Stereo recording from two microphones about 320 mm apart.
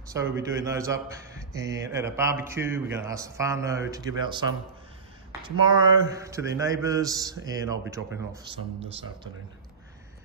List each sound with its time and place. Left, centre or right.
0.1 s speech: centre